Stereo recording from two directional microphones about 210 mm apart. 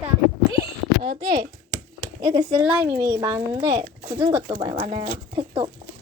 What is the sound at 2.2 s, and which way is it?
A child's voice, 15° right (ahead or behind).